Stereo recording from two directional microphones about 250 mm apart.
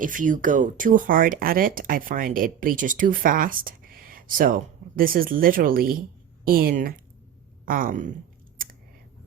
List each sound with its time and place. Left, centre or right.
0.0 s speech: right